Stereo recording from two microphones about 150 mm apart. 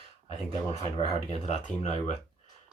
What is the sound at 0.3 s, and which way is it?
Speech, 45° left (ahead or behind).